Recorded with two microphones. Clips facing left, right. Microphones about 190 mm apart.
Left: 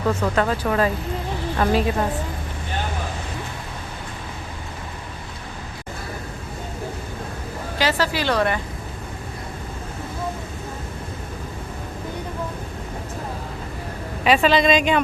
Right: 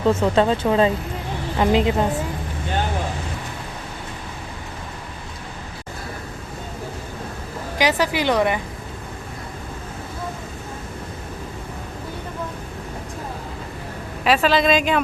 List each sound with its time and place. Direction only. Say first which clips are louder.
0.0 s speech: right 4 dB; 25° right (ahead or behind)
7.8 s a woman's voice: right 2 dB; 15° right (ahead or behind)
14.3 s speech: left 1 dB; centre (ahead or behind)